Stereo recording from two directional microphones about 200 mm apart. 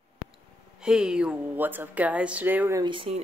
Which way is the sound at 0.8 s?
5° right (ahead or behind).